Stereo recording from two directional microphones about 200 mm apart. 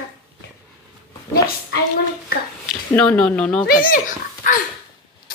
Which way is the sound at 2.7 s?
5° left (ahead or behind).